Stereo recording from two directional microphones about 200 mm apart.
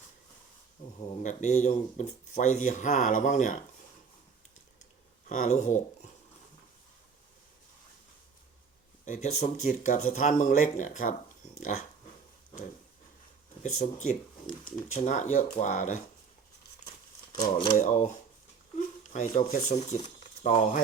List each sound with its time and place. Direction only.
0.9 s speech: 35° left (ahead or behind)
5.3 s speech: 35° left (ahead or behind)
9.0 s speech: 35° left (ahead or behind)
13.6 s speech: 35° left (ahead or behind)
17.4 s speech: 25° left (ahead or behind)
17.8 s speech: 40° left (ahead or behind)
19.1 s speech: 40° left (ahead or behind)